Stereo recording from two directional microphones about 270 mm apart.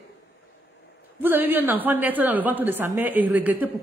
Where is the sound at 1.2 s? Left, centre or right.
Centre.